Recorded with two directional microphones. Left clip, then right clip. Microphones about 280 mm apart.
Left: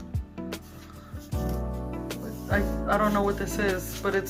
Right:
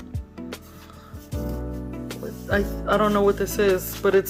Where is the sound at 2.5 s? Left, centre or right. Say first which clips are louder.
Right 4 dB; right.